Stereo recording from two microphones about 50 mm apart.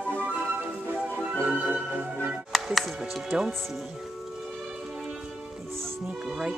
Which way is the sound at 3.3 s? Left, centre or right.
Centre.